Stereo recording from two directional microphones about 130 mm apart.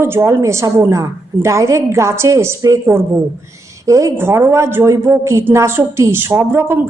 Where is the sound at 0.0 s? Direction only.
20° right (ahead or behind).